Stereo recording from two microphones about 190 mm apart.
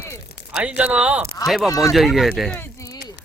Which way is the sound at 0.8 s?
5° right (ahead or behind).